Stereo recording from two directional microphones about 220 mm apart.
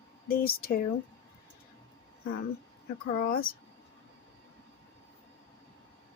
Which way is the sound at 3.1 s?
40° left (ahead or behind).